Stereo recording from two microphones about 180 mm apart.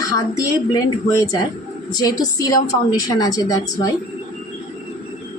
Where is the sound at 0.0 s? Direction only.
20° left (ahead or behind).